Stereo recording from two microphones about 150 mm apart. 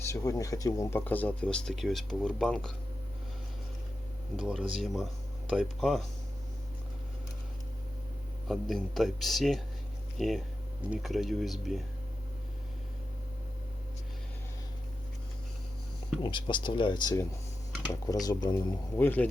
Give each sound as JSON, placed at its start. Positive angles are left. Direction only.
{"t": 0.0, "sound": "speech", "side_deg": 20}
{"t": 4.4, "sound": "speech", "side_deg": -5}
{"t": 8.4, "sound": "speech", "side_deg": 0}
{"t": 16.2, "sound": "speech", "side_deg": 35}
{"t": 18.9, "sound": "speech", "side_deg": 10}